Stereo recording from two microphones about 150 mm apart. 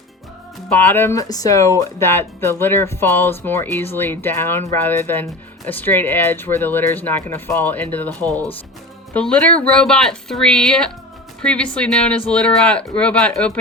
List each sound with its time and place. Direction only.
0.7 s speech: 15° left (ahead or behind)